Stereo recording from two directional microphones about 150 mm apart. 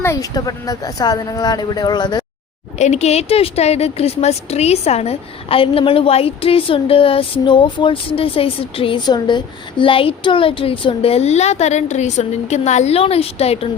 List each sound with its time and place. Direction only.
0.0 s speech: 20° left (ahead or behind)
2.7 s speech: 50° left (ahead or behind)